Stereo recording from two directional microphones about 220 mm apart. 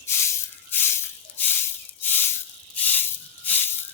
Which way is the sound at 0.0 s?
10° left (ahead or behind).